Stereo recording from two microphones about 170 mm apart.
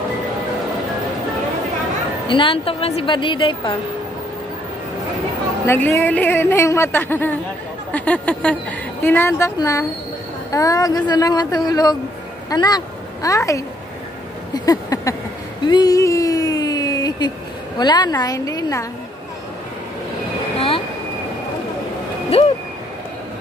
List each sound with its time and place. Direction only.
2.2 s speech: 30° left (ahead or behind)
5.7 s a woman's voice: 15° left (ahead or behind)
14.5 s a sound: 20° left (ahead or behind)
17.7 s speech: 25° left (ahead or behind)
20.5 s vehicle: 35° left (ahead or behind)
22.3 s speech: 35° left (ahead or behind)